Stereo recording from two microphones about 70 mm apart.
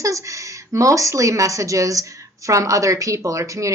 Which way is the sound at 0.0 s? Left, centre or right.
Right.